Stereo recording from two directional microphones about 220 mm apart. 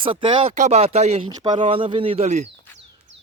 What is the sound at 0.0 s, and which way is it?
Speech, 25° right (ahead or behind).